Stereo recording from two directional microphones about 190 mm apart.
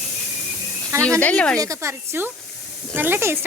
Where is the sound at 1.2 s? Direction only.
10° left (ahead or behind).